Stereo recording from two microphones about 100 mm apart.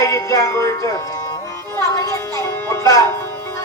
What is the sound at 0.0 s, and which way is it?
Music, 35° left (ahead or behind).